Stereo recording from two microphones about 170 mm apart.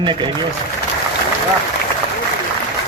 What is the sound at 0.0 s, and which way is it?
Speech, 30° right (ahead or behind).